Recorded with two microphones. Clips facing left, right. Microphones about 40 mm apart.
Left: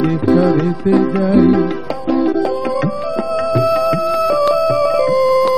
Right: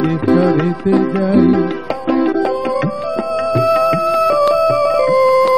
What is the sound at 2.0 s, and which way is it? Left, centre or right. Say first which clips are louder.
Music: even; right.